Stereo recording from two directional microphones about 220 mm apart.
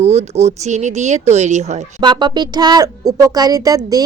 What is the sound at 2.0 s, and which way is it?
Speech, 20° right (ahead or behind).